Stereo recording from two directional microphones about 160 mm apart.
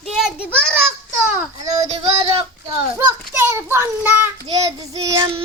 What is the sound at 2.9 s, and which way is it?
Child singing, 15° right (ahead or behind).